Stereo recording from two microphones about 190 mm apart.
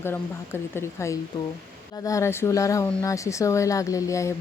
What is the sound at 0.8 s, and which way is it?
A woman's voice, 15° left (ahead or behind).